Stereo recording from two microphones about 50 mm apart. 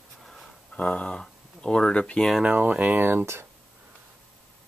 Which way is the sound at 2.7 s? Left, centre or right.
Right.